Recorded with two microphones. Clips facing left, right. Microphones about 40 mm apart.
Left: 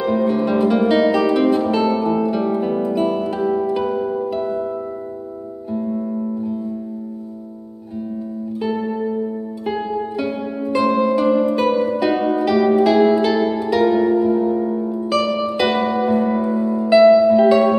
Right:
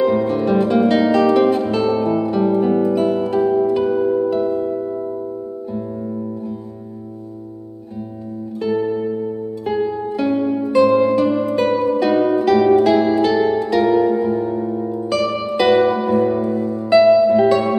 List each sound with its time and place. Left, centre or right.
0.0 s music: centre
8.5 s music: centre
16.3 s music: centre
16.9 s music: centre